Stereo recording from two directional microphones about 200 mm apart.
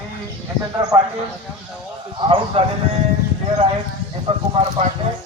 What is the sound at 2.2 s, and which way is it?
Speech, 25° right (ahead or behind).